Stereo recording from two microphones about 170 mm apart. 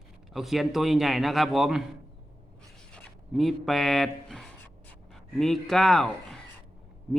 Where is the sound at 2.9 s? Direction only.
Centre (ahead or behind).